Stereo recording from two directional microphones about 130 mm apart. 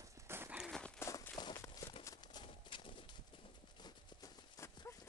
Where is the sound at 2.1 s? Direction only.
35° left (ahead or behind).